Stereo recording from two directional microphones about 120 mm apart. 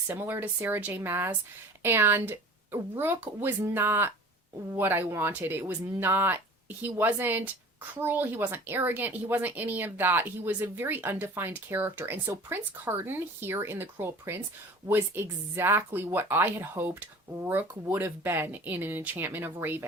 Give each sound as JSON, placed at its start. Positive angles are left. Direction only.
{"t": 0.1, "sound": "speech", "side_deg": -20}